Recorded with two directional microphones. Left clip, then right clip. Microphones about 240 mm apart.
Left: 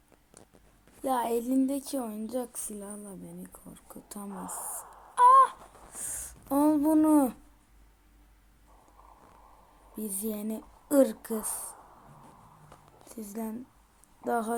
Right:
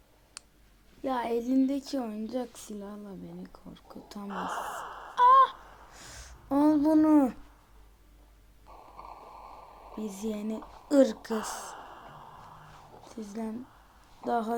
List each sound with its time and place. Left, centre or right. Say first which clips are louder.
1.0 s a woman's voice: left 1 dB; centre
4.3 s sigh: right 8 dB; right
5.1 s wail: left 1 dB; centre
5.9 s a sound: left 9 dB; centre
9.0 s clip-clop: right 10 dB; right
10.0 s a woman's voice: even; centre
11.3 s a sound: right 3 dB; right
13.1 s a woman's voice: even; centre